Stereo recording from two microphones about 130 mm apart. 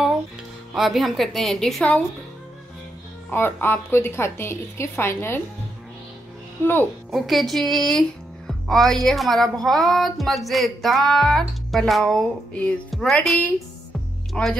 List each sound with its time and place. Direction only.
0.7 s speech: centre (ahead or behind)
3.3 s a woman's voice: 15° left (ahead or behind)
6.6 s a woman's voice: 15° left (ahead or behind)
7.1 s speech: centre (ahead or behind)